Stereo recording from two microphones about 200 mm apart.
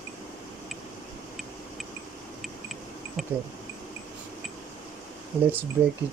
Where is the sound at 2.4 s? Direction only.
Centre (ahead or behind).